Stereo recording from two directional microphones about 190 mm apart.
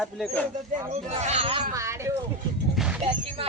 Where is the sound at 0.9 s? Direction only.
35° right (ahead or behind).